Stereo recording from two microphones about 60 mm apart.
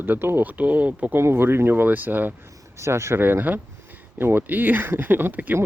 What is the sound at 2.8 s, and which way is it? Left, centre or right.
Speech, right.